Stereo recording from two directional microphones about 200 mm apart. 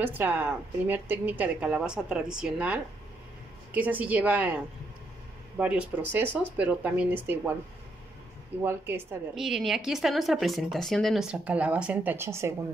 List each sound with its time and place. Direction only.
0.0 s a woman's voice: 10° right (ahead or behind)
5.6 s a woman's voice: 5° right (ahead or behind)
8.6 s a woman's voice: 10° right (ahead or behind)
9.3 s speech: centre (ahead or behind)